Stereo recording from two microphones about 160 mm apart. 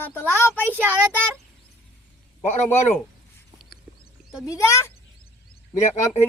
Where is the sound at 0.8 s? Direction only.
10° right (ahead or behind).